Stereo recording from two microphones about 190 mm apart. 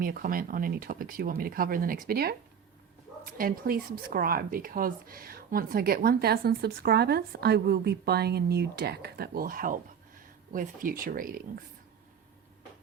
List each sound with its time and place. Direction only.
0.0 s speech: 50° right (ahead or behind)